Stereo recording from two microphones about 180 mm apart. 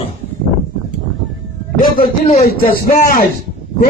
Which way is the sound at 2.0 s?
35° left (ahead or behind).